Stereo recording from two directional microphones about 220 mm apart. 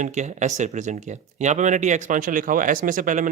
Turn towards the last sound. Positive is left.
turn(degrees=-35)  # may be behind; listen again after turning